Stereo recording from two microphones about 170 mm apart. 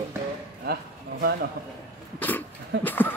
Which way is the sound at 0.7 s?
65° right (ahead or behind).